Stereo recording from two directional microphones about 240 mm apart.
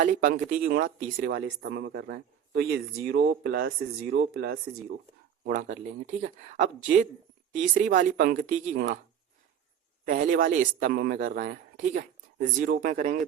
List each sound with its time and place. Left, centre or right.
0.0 s speech: right
10.1 s speech: right